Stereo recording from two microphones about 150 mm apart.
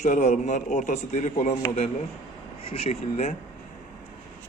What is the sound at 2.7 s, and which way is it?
Speech, 45° left (ahead or behind).